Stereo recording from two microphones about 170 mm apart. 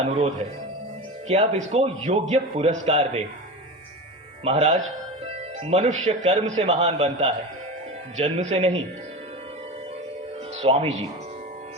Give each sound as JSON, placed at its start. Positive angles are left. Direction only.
{"t": 0.0, "sound": "a man's voice", "side_deg": -40}
{"t": 4.4, "sound": "a man's voice", "side_deg": -40}
{"t": 10.6, "sound": "a man's voice", "side_deg": -40}